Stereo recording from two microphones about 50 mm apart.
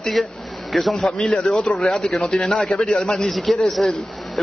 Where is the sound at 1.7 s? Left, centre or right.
Centre.